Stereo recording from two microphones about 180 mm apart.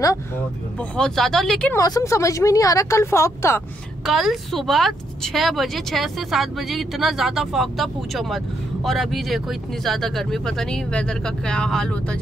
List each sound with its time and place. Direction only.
0.7 s speech: 5° left (ahead or behind)
1.8 s a woman's voice: 20° left (ahead or behind)
4.0 s speech: centre (ahead or behind)